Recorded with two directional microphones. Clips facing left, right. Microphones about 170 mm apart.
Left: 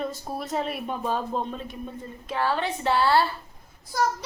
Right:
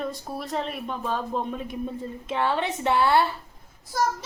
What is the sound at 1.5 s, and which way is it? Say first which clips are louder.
Child singing: right 3 dB; 15° right (ahead or behind).